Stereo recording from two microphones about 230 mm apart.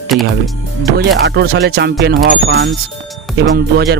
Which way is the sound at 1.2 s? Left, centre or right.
Right.